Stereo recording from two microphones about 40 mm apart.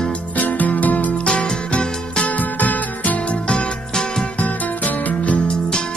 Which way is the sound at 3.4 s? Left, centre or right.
Centre.